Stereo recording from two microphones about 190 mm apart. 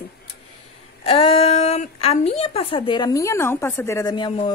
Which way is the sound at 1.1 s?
30° left (ahead or behind).